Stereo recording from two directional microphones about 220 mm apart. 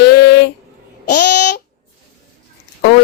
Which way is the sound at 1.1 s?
50° left (ahead or behind).